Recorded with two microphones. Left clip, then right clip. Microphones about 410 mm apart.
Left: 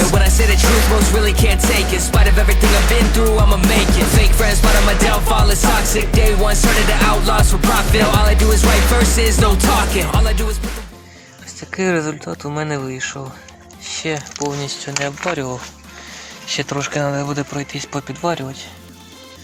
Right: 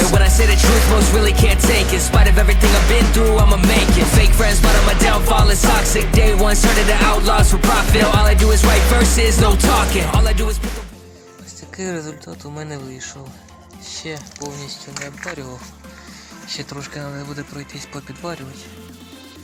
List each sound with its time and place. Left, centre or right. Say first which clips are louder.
0.0 s music: even; centre
11.7 s speech: left 9 dB; left